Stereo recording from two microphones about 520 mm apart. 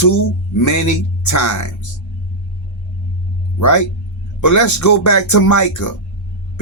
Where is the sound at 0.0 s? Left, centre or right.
Left.